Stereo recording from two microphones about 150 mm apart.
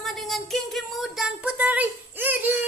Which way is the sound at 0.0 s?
Centre (ahead or behind).